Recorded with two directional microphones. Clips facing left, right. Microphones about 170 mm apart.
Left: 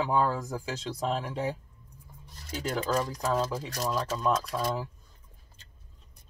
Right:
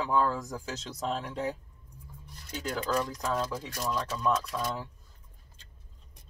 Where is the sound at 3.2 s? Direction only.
5° left (ahead or behind).